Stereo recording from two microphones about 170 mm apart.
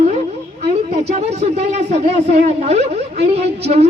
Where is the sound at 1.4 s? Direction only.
40° right (ahead or behind).